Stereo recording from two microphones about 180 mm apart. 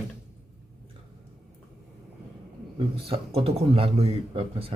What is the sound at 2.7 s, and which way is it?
A man's voice, 30° right (ahead or behind).